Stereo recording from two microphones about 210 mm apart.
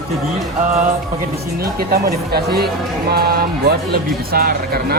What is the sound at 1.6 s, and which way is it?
Speech, 45° right (ahead or behind).